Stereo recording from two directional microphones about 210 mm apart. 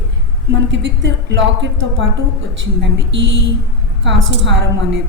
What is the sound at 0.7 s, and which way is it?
A woman's voice, 55° right (ahead or behind).